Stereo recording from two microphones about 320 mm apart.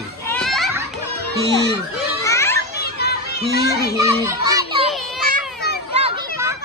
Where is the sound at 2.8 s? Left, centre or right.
Left.